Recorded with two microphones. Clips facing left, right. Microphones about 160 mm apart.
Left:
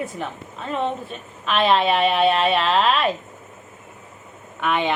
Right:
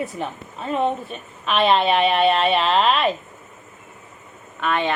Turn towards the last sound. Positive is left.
turn(degrees=15)  # may be behind; listen again after turning